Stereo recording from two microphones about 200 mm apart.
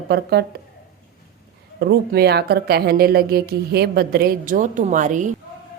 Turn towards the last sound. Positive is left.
turn(degrees=-40)  # may be behind; listen again after turning